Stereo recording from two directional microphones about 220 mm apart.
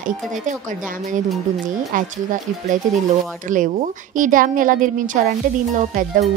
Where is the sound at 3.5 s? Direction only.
35° right (ahead or behind).